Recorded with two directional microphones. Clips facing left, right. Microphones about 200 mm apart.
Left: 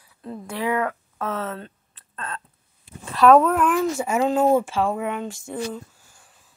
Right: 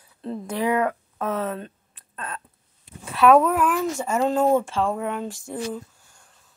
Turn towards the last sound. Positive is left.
turn(degrees=5)  # may be behind; listen again after turning